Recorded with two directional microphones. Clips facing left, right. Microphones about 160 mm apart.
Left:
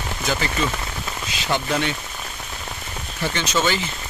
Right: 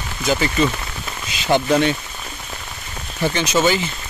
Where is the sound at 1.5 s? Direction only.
20° right (ahead or behind).